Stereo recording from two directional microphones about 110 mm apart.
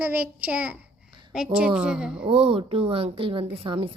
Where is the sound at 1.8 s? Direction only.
5° right (ahead or behind).